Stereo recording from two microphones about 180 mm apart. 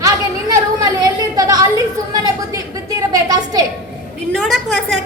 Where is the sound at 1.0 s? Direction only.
20° right (ahead or behind).